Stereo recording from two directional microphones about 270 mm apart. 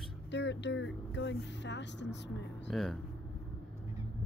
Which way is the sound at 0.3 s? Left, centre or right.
Left.